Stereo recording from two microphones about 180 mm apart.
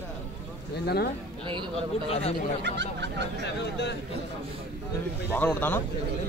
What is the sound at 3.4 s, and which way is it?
Speech, 70° left (ahead or behind).